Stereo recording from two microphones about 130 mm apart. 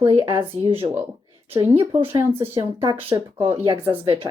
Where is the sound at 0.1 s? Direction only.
40° right (ahead or behind).